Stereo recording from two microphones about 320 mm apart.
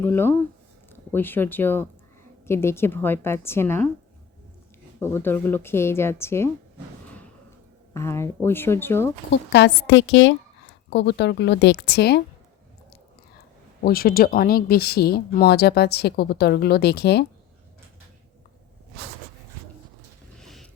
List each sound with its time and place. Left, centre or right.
0.0 s a woman's voice: centre
4.9 s a woman's voice: centre
7.9 s a woman's voice: centre
9.3 s a woman's voice: left
13.8 s speech: left
20.4 s a sound: centre